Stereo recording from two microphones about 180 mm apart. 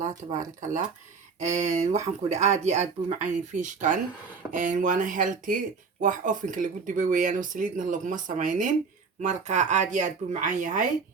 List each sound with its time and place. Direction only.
0.3 s speech: 45° right (ahead or behind)